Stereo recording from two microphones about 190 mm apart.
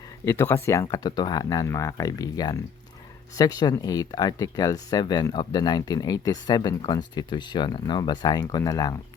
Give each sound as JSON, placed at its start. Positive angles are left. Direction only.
{"t": 0.3, "sound": "speech", "side_deg": 15}